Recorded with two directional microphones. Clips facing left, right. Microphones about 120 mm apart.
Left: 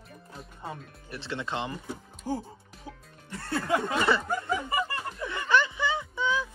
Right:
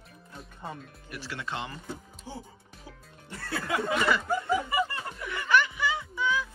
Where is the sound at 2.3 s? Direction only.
45° left (ahead or behind).